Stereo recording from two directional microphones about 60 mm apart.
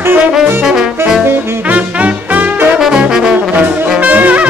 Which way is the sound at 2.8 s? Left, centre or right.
Centre.